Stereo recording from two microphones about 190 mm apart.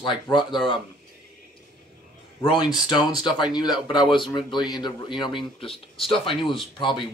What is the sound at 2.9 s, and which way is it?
Speech, 20° left (ahead or behind).